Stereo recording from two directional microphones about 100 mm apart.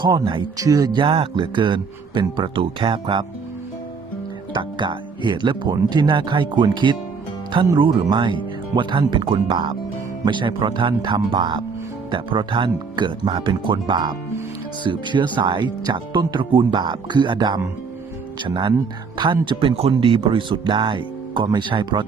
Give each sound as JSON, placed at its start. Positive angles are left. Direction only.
{"t": 0.0, "sound": "speech", "side_deg": -55}
{"t": 0.5, "sound": "speech", "side_deg": -35}
{"t": 1.0, "sound": "speech", "side_deg": -65}
{"t": 4.5, "sound": "speech", "side_deg": -50}
{"t": 19.9, "sound": "speech", "side_deg": -60}